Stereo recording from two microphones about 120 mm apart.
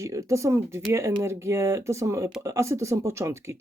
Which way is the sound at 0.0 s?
25° right (ahead or behind).